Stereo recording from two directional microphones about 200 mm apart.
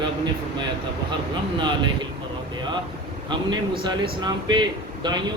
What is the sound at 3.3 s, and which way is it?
Speech, 25° right (ahead or behind).